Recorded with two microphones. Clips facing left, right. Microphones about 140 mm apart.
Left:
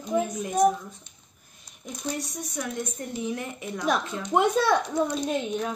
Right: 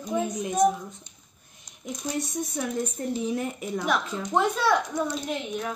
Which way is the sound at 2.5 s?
25° right (ahead or behind).